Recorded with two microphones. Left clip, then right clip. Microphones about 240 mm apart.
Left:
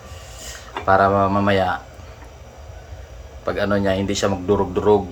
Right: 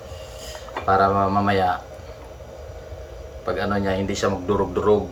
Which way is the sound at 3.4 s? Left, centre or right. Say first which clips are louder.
Left 3 dB; left.